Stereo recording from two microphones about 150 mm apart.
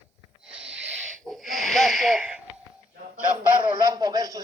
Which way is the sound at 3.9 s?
25° right (ahead or behind).